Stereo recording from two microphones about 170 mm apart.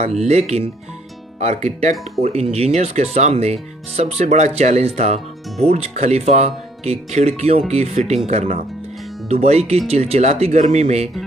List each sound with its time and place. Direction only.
0.0 s speech: 40° right (ahead or behind)